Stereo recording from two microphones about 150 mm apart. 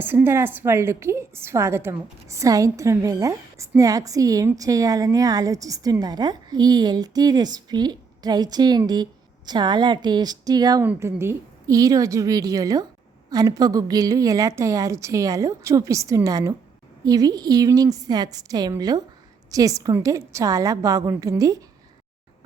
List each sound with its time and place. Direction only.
0.0 s a woman's voice: 15° right (ahead or behind)